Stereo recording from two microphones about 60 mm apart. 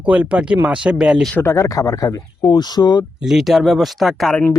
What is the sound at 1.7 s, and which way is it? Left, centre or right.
Speech, left.